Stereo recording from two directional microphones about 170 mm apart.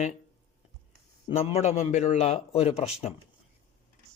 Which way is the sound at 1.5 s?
40° left (ahead or behind).